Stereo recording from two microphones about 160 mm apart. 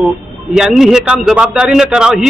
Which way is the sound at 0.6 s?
5° right (ahead or behind).